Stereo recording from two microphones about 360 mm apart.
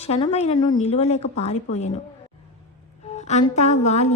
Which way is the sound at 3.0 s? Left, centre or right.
Centre.